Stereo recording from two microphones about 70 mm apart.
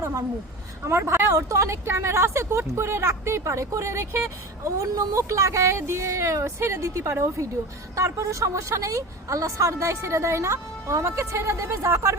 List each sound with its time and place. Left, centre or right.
0.0 s a woman's voice: right
0.9 s speech: right